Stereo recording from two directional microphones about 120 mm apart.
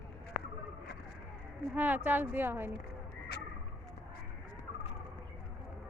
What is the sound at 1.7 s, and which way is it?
Speech, 15° right (ahead or behind).